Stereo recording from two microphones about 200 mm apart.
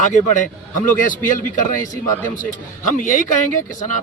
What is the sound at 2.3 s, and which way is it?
A man's voice, 40° left (ahead or behind).